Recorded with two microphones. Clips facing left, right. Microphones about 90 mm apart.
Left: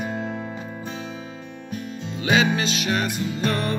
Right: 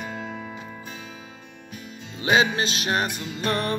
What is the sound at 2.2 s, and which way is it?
Music, 35° right (ahead or behind).